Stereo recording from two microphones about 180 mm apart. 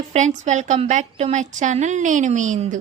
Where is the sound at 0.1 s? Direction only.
40° right (ahead or behind).